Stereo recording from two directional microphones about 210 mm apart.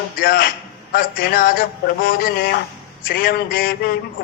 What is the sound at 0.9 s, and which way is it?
A man's voice, 45° left (ahead or behind).